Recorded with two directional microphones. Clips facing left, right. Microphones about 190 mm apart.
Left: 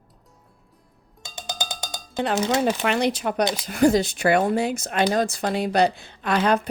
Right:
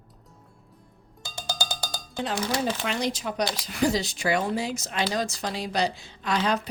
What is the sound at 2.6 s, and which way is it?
Speech, 65° left (ahead or behind).